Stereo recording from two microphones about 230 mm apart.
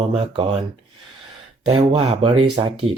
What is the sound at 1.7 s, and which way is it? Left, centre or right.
Speech, right.